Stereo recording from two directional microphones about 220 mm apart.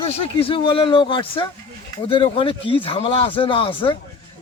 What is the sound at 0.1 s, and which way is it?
Speech, 25° left (ahead or behind).